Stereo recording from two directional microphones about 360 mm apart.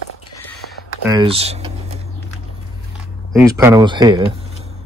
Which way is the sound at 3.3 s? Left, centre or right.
Centre.